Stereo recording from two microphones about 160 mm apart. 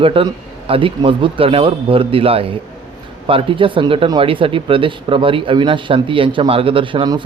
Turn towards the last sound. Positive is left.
turn(degrees=-30)  # may be behind; listen again after turning